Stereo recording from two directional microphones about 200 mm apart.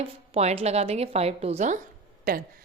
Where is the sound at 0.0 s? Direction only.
30° right (ahead or behind).